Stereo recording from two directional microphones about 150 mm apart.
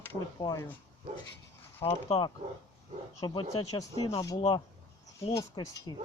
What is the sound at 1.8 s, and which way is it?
Speech, 40° left (ahead or behind).